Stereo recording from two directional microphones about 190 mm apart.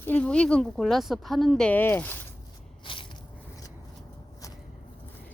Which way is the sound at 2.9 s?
25° left (ahead or behind).